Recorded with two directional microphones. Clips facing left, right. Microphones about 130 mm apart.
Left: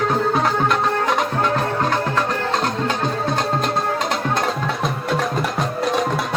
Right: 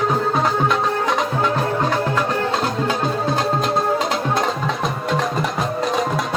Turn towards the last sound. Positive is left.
turn(degrees=0)  # may be behind; listen again after turning